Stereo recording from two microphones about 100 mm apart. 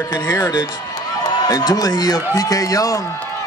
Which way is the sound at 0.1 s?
35° left (ahead or behind).